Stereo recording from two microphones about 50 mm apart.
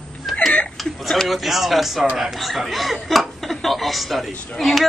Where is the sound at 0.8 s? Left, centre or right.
Centre.